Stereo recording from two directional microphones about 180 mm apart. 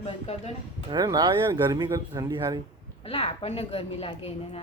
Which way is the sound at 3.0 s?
35° left (ahead or behind).